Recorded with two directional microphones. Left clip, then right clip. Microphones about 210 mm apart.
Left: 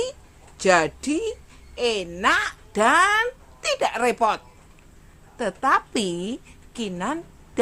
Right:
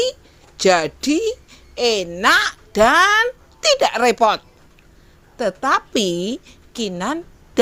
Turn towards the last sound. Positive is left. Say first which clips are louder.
# right 7 dB
turn(degrees=-25)  # may be behind; listen again after turning